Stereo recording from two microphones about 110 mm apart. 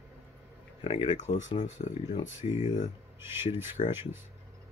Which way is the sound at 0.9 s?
60° left (ahead or behind).